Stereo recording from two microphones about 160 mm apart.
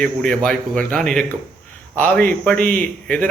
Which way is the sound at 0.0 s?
5° left (ahead or behind).